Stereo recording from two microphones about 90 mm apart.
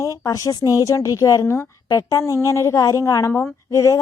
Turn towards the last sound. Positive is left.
turn(degrees=35)  # may be behind; listen again after turning